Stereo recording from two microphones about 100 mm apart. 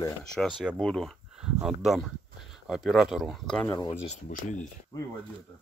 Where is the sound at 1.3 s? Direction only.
5° right (ahead or behind).